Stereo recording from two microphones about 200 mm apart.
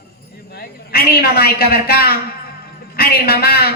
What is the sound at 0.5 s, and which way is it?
A man's voice, 50° left (ahead or behind).